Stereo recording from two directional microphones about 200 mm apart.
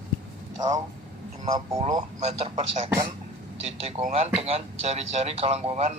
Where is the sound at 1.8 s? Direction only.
30° right (ahead or behind).